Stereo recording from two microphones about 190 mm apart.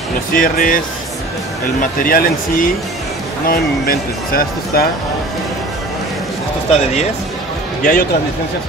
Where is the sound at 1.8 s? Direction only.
50° left (ahead or behind).